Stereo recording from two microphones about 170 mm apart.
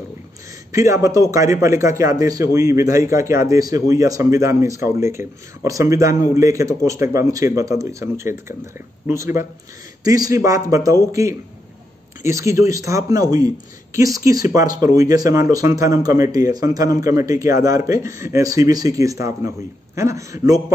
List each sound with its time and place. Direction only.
0.7 s a man's voice: 20° right (ahead or behind)